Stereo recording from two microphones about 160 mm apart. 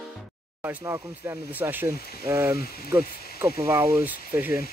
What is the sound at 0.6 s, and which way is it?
Speech, 20° right (ahead or behind).